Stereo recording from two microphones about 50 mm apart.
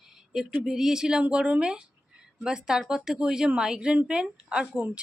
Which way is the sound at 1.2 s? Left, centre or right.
Right.